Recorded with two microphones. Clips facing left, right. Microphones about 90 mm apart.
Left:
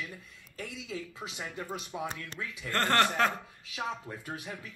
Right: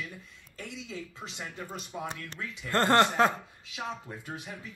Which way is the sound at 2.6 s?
25° right (ahead or behind).